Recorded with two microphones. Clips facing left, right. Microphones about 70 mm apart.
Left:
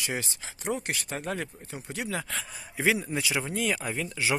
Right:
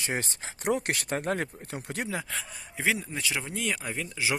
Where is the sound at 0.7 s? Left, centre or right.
Right.